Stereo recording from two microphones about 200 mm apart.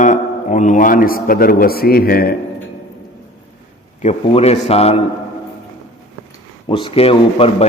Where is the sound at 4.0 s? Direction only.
35° left (ahead or behind).